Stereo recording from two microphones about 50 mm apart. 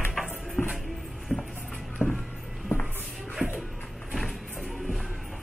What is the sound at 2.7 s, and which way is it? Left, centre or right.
Music, left.